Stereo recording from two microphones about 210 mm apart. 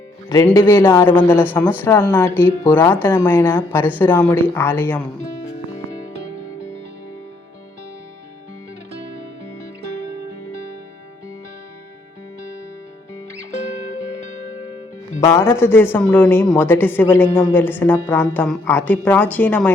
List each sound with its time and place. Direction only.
0.3 s speech: 15° left (ahead or behind)
8.9 s music: 50° right (ahead or behind)
15.2 s speech: 15° left (ahead or behind)